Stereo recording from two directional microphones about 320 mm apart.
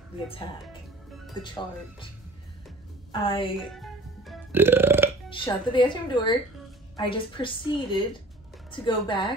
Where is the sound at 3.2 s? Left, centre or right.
Centre.